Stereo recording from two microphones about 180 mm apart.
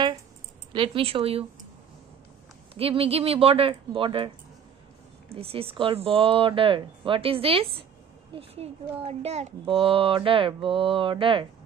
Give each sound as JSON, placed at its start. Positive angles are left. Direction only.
{"t": 0.7, "sound": "speech", "side_deg": -30}
{"t": 2.7, "sound": "speech", "side_deg": -30}
{"t": 5.3, "sound": "a child's voice", "side_deg": -30}